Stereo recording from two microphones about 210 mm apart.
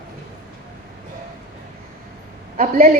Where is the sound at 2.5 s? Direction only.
45° right (ahead or behind).